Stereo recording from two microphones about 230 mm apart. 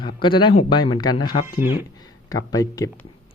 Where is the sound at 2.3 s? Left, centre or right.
Centre.